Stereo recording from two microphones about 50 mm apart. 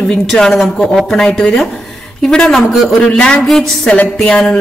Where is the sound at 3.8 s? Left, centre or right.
Left.